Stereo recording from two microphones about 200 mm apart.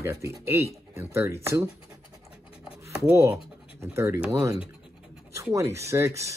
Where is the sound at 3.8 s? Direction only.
15° right (ahead or behind).